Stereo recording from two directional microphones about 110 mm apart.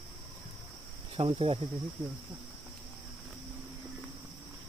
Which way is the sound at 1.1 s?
60° right (ahead or behind).